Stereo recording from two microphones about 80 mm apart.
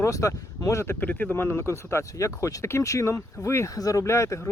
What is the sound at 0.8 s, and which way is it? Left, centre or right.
Speech, left.